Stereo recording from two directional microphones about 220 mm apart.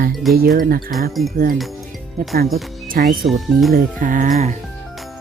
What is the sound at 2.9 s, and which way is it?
Speech, 40° right (ahead or behind).